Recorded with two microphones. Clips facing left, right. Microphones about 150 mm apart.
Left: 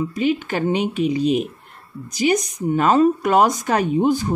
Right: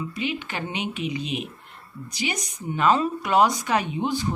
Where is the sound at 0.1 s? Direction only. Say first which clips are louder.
Left 9 dB; 40° left (ahead or behind).